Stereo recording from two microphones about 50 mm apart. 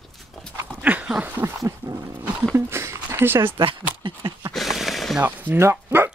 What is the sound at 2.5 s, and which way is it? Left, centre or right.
Speech, right.